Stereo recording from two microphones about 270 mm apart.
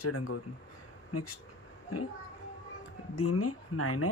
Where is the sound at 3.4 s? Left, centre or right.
Left.